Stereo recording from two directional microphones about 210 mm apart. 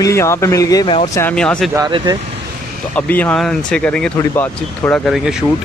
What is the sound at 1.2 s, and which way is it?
Speech, 5° left (ahead or behind).